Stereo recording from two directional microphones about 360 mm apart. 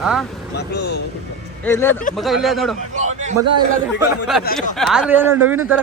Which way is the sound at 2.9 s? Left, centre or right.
Centre.